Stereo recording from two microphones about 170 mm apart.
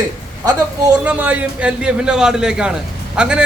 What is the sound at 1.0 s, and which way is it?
A man's voice, 10° right (ahead or behind).